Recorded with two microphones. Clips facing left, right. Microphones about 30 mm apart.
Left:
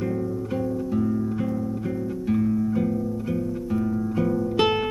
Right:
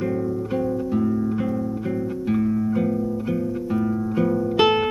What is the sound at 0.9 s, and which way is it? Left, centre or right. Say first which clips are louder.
Music: right 2 dB; centre.